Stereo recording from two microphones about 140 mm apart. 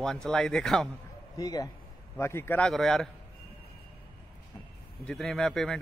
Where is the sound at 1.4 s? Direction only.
25° left (ahead or behind).